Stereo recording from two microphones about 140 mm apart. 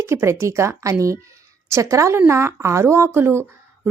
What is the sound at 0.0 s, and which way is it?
A woman's voice, 20° right (ahead or behind).